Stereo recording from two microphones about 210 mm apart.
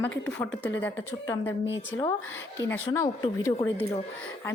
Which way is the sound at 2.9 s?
15° left (ahead or behind).